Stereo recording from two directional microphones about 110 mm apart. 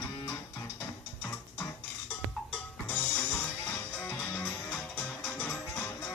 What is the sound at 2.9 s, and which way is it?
Music, 15° left (ahead or behind).